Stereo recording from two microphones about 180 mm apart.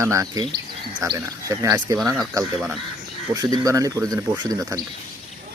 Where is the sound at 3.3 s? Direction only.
20° right (ahead or behind).